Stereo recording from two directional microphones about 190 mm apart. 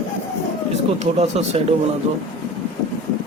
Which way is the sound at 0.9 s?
30° right (ahead or behind).